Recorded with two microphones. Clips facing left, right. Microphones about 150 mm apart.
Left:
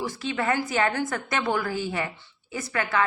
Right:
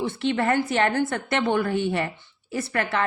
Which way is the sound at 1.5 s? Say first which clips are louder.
Right 5 dB; 25° right (ahead or behind).